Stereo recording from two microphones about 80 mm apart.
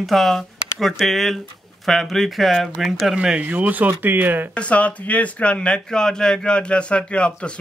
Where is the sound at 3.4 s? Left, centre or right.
Right.